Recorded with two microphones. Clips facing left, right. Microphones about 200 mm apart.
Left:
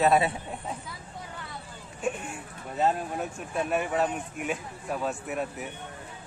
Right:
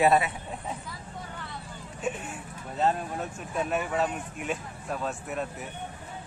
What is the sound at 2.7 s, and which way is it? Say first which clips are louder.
Speech: left 1 dB; 10° left (ahead or behind).